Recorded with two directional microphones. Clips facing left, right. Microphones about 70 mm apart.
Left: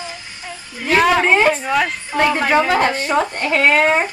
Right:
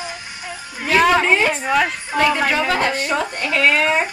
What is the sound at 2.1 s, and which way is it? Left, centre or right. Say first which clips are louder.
Speech: left 1 dB; centre.